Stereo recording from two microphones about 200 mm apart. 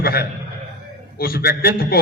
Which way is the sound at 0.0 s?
50° left (ahead or behind).